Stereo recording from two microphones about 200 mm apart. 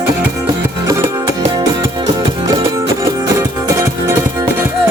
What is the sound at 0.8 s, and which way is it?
Music, 15° right (ahead or behind).